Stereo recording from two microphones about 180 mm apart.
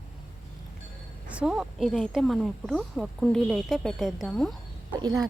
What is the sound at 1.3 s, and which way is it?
Speech, 5° right (ahead or behind).